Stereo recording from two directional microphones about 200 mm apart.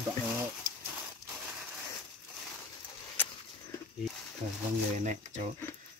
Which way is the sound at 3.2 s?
10° left (ahead or behind).